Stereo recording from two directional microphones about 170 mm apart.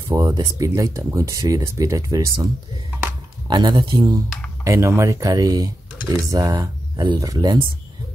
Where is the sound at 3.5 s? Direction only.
25° right (ahead or behind).